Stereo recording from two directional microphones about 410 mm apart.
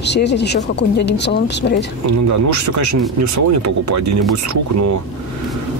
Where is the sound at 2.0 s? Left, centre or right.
Right.